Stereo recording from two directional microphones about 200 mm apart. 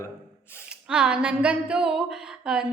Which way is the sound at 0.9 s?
5° right (ahead or behind).